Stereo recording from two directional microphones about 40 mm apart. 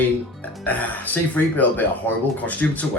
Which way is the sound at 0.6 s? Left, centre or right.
Left.